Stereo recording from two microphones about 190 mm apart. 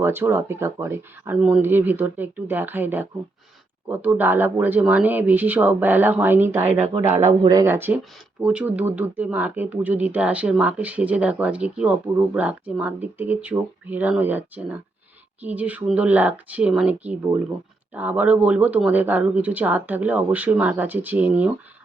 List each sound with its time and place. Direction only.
0.0 s speech: 10° right (ahead or behind)
6.8 s speech: 35° right (ahead or behind)
7.4 s speech: 15° right (ahead or behind)